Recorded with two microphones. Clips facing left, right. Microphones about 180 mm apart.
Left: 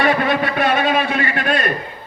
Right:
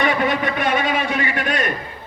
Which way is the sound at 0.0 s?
50° left (ahead or behind).